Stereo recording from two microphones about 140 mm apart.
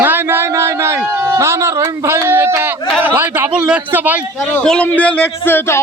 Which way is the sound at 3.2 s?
15° right (ahead or behind).